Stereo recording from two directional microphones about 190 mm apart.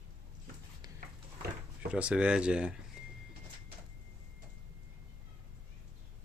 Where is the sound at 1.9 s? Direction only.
5° right (ahead or behind).